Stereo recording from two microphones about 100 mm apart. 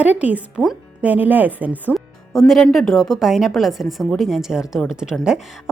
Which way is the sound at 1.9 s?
Centre (ahead or behind).